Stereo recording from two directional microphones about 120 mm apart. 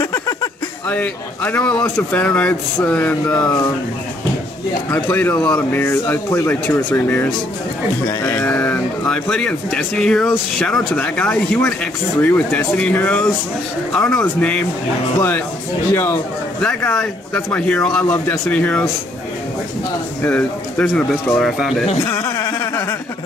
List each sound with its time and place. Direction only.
0.0 s a sound: 35° left (ahead or behind)
0.8 s speech: 10° left (ahead or behind)
3.3 s speech: 30° left (ahead or behind)
4.9 s speech: 15° left (ahead or behind)
15.9 s speech: 20° left (ahead or behind)
16.6 s speech: 10° left (ahead or behind)
20.2 s speech: 10° left (ahead or behind)
21.4 s speech: centre (ahead or behind)
22.0 s a sound: 30° left (ahead or behind)